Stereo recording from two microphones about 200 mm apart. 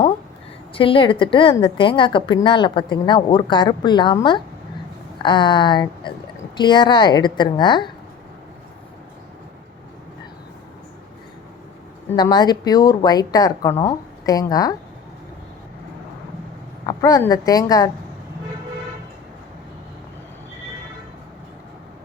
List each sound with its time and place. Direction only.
0.7 s a woman's voice: 25° left (ahead or behind)
12.1 s a woman's voice: 20° left (ahead or behind)
16.8 s a woman's voice: 15° left (ahead or behind)